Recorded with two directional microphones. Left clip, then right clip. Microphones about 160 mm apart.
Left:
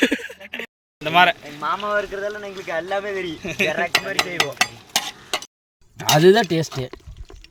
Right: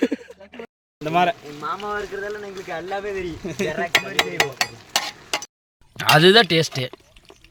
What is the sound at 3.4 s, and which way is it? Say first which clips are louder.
Speech: left 6 dB; 50° right (ahead or behind).